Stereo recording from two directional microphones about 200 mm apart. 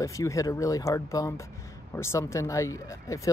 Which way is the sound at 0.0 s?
15° left (ahead or behind).